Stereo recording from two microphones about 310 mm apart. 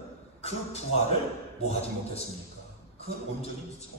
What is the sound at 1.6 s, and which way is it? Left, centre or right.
Speech, centre.